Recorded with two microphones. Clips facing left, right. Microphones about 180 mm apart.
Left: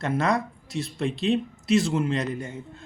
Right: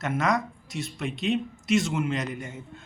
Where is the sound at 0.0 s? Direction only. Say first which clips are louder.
Left 2 dB; 30° left (ahead or behind).